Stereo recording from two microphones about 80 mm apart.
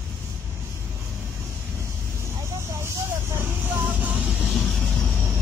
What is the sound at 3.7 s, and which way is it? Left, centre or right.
Vehicle, right.